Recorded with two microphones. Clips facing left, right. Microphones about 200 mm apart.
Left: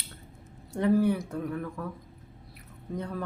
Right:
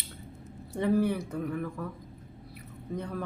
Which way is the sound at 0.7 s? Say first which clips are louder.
Left 2 dB; centre (ahead or behind).